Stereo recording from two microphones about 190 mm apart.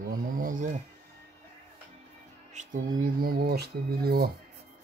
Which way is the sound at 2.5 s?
45° right (ahead or behind).